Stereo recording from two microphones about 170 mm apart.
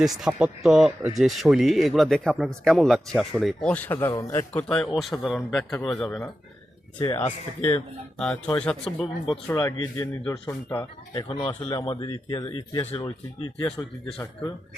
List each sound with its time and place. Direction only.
0.0 s speech: centre (ahead or behind); by 4.6 s 15° left (ahead or behind)
4.9 s speech: centre (ahead or behind)
5.5 s speech: 15° left (ahead or behind)
5.8 s speech: centre (ahead or behind)
7.1 s speech: 15° left (ahead or behind)
9.5 s speech: 20° left (ahead or behind)
11.1 s speech: 25° left (ahead or behind)